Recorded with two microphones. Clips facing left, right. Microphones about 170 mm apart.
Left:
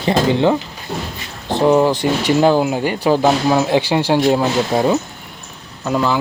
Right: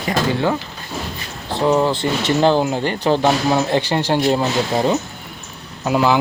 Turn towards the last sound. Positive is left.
turn(degrees=-5)  # may be behind; listen again after turning